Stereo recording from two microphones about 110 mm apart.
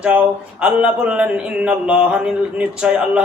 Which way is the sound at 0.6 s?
10° right (ahead or behind).